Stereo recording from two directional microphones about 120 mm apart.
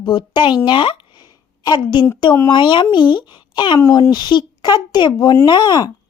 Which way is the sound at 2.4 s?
40° left (ahead or behind).